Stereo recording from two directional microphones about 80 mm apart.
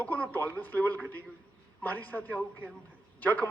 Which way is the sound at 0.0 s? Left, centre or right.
Left.